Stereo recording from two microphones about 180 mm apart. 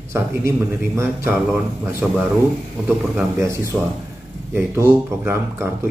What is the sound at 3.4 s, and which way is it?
Speech, 15° right (ahead or behind).